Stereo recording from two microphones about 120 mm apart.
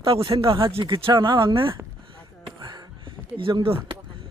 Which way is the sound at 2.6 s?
35° right (ahead or behind).